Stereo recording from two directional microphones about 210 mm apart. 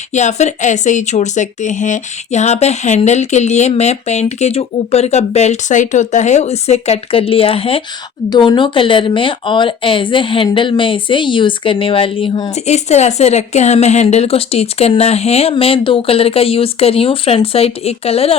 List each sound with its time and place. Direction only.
0.1 s speech: 35° left (ahead or behind)